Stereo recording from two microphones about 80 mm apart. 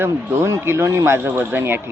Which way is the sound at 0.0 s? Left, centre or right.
Right.